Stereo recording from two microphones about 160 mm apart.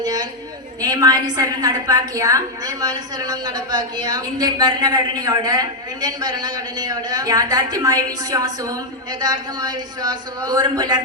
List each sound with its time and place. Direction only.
0.0 s a woman's voice: 25° right (ahead or behind)